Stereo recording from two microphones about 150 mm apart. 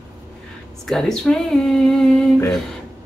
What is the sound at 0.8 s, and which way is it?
Speech, centre (ahead or behind).